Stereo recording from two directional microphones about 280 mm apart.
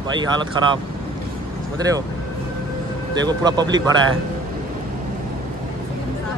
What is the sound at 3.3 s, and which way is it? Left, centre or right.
Speech, centre.